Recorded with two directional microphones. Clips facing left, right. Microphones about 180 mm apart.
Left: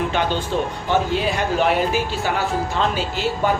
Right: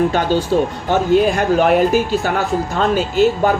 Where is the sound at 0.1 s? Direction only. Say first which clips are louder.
Right 6 dB; 40° right (ahead or behind).